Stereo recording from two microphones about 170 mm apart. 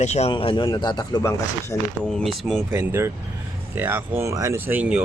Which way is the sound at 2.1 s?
Centre (ahead or behind).